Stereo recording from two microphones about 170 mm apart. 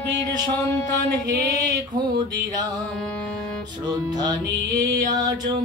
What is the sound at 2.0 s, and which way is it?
Music, 25° right (ahead or behind).